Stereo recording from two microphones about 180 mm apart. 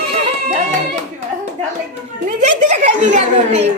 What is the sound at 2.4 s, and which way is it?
A woman's voice, 40° right (ahead or behind).